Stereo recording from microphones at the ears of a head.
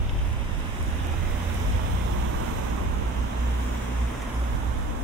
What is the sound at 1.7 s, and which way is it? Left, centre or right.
Vehicle, right.